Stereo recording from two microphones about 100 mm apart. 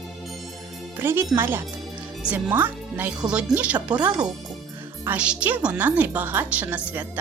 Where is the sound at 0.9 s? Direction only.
25° right (ahead or behind).